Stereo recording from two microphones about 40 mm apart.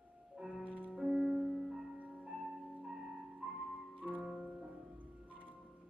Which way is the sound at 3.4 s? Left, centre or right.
Right.